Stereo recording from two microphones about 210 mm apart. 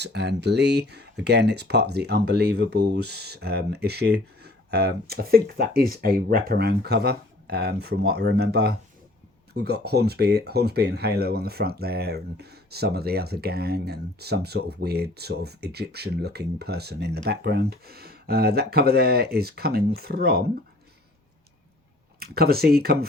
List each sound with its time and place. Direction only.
0.0 s speech: 55° right (ahead or behind)
22.2 s speech: 45° right (ahead or behind)